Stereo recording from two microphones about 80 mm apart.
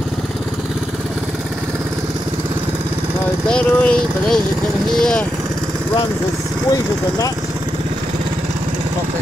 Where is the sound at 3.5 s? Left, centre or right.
Centre.